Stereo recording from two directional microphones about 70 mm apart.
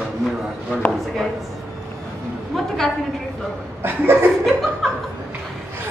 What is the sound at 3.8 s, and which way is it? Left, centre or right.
Chuckle, right.